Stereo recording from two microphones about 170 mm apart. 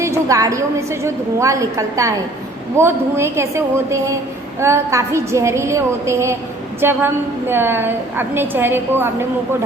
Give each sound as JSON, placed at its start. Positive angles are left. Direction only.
{"t": 0.0, "sound": "a woman's voice", "side_deg": -20}